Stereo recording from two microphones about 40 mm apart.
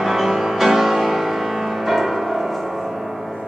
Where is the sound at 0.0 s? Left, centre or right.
Centre.